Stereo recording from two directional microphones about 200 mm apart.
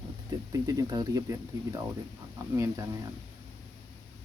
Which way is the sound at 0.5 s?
20° right (ahead or behind).